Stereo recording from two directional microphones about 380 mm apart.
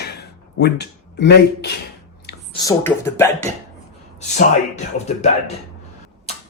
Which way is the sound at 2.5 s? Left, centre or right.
Centre.